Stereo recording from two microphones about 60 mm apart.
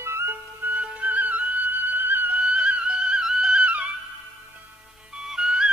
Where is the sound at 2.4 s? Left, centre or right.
Centre.